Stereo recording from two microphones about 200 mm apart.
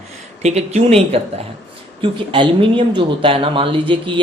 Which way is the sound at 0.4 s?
30° right (ahead or behind).